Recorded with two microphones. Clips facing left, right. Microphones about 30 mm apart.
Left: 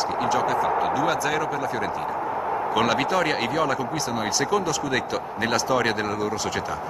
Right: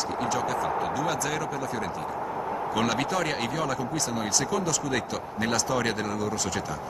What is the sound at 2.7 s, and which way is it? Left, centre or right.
A man's voice, centre.